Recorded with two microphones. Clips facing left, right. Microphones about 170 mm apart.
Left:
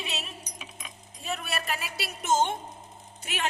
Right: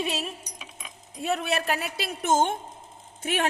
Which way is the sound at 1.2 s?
70° right (ahead or behind).